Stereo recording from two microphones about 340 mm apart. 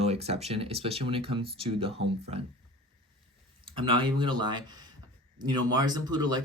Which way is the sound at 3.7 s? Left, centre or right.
Centre.